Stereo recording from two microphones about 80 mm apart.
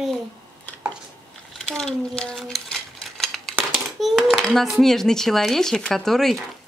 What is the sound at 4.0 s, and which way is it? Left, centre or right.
Speech, centre.